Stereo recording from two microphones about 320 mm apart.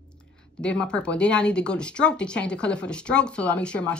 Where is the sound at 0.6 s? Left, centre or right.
Centre.